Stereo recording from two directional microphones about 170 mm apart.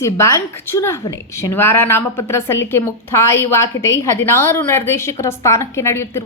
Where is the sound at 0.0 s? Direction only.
15° left (ahead or behind).